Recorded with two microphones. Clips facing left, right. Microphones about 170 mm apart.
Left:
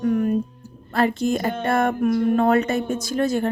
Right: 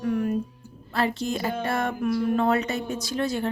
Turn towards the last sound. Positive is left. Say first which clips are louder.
# left 5 dB
turn(degrees=45)  # may be behind; listen again after turning